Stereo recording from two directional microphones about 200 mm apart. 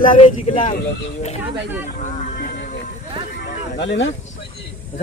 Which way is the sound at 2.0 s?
40° left (ahead or behind).